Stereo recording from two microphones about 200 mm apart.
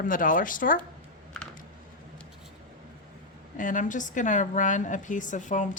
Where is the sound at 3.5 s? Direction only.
40° left (ahead or behind).